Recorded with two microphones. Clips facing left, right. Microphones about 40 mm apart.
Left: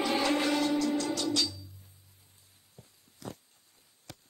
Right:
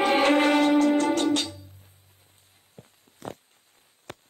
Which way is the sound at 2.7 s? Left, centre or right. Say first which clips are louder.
Right 6 dB; right.